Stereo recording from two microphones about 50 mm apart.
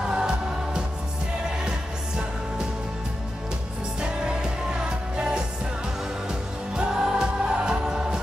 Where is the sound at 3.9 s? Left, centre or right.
Centre.